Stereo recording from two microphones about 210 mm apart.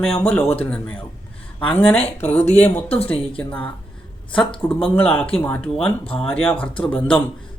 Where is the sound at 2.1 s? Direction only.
5° left (ahead or behind).